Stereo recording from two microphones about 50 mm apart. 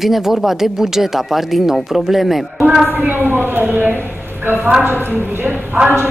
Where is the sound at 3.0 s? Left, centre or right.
Right.